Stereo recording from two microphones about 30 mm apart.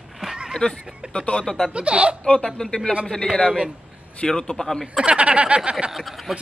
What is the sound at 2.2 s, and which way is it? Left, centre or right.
Speech, left.